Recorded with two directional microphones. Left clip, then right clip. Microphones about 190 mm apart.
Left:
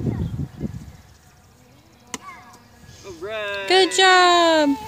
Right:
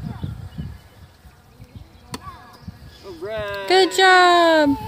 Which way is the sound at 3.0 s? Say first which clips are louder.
Even; 35° right (ahead or behind).